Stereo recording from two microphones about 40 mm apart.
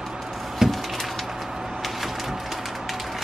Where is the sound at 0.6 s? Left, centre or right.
Centre.